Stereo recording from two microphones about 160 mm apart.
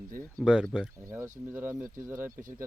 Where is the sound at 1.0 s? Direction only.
20° right (ahead or behind).